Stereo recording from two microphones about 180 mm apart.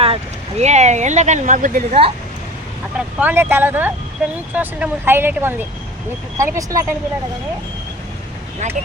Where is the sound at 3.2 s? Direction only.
10° right (ahead or behind).